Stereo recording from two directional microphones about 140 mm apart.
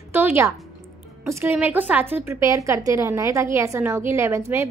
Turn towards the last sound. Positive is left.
turn(degrees=-20)  # may be behind; listen again after turning